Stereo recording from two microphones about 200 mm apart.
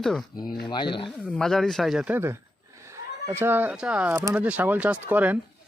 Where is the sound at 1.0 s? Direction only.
Centre (ahead or behind).